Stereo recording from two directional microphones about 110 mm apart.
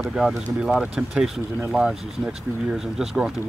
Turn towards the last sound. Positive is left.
turn(degrees=-5)  # may be behind; listen again after turning